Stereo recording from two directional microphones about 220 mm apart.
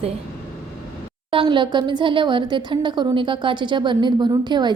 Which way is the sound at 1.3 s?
20° right (ahead or behind).